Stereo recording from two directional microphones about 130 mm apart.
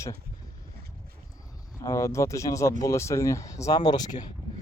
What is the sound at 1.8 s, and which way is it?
Speech, 25° left (ahead or behind).